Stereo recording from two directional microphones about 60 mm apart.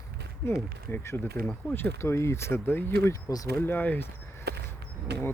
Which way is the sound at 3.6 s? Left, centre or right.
Left.